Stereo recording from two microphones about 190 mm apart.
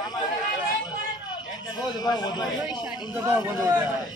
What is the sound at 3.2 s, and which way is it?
Speech, 10° right (ahead or behind).